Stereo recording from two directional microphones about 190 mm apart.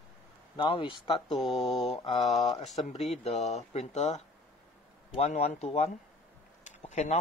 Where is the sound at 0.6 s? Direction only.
25° left (ahead or behind).